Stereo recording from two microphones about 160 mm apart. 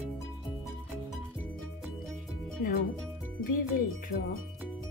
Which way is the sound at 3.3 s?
60° left (ahead or behind).